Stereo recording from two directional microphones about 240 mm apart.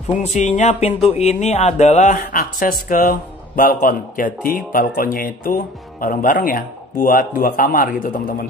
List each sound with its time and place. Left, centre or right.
0.2 s speech: left